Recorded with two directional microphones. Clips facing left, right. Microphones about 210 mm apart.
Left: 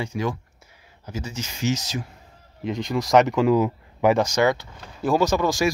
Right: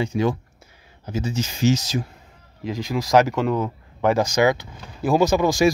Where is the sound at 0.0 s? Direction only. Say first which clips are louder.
Right 5 dB; 25° right (ahead or behind).